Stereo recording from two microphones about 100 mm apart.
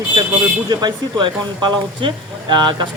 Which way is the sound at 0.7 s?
50° right (ahead or behind).